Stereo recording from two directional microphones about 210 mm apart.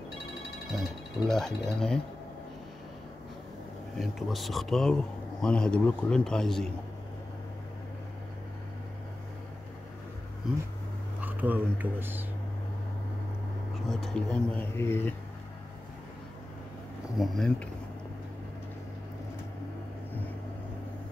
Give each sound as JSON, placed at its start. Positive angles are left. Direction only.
{"t": 0.7, "sound": "speech", "side_deg": 0}
{"t": 4.0, "sound": "speech", "side_deg": 0}
{"t": 11.1, "sound": "speech", "side_deg": -10}
{"t": 13.8, "sound": "speech", "side_deg": 5}
{"t": 17.2, "sound": "speech", "side_deg": 0}